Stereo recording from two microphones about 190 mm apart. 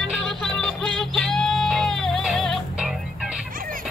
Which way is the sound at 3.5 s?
45° right (ahead or behind).